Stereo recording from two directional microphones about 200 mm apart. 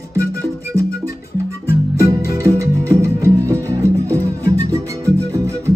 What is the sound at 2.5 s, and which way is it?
Music, 15° right (ahead or behind).